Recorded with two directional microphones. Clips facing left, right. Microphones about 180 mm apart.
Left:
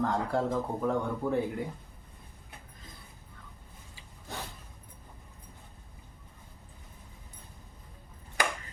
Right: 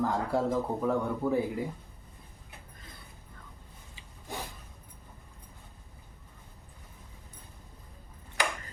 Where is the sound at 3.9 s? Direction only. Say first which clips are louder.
Right 2 dB; 15° right (ahead or behind).